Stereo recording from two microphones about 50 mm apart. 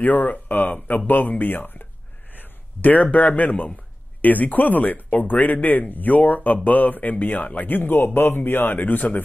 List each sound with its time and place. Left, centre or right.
0.0 s a man's voice: left